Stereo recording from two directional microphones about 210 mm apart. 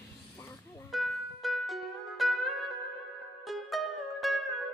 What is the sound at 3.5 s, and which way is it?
Music, centre (ahead or behind).